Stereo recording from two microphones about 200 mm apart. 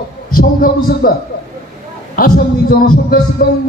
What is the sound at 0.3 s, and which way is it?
Speech, 45° left (ahead or behind).